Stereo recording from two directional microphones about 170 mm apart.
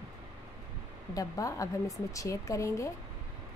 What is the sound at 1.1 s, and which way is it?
Speech, 20° left (ahead or behind).